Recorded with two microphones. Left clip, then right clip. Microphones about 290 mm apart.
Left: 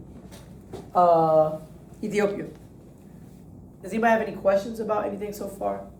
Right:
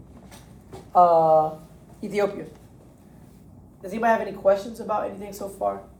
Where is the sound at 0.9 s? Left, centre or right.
Centre.